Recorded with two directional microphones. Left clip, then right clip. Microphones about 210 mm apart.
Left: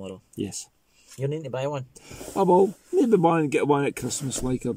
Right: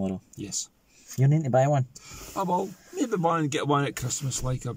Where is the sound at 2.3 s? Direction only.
20° left (ahead or behind).